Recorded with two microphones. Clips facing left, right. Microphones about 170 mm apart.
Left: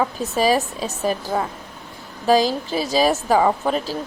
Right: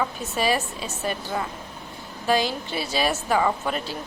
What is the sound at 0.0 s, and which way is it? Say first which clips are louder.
A woman's voice: left 5 dB; 35° left (ahead or behind).